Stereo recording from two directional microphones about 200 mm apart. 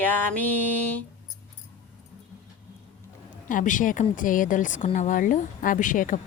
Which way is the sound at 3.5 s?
40° left (ahead or behind).